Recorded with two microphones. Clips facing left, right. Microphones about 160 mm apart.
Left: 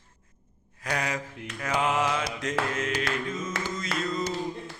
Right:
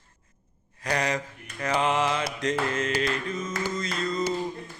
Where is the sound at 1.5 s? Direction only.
Centre (ahead or behind).